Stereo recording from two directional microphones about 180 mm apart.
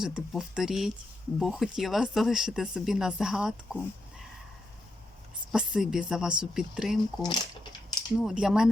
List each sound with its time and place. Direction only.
0.0 s speech: 5° right (ahead or behind)
5.5 s speech: 5° right (ahead or behind)
7.2 s speech: 25° left (ahead or behind)
8.2 s speech: 5° right (ahead or behind)